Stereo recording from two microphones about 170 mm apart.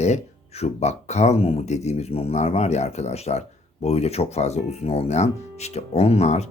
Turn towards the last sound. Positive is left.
turn(degrees=40)  # may be behind; listen again after turning